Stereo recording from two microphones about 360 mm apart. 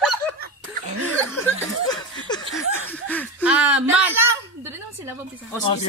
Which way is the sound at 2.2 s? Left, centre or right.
Centre.